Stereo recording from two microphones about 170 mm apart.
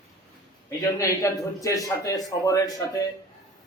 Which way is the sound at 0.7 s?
20° left (ahead or behind).